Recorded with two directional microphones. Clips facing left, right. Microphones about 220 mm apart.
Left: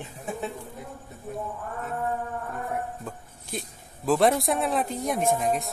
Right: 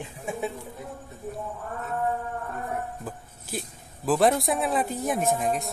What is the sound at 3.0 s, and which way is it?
Speech, 5° right (ahead or behind).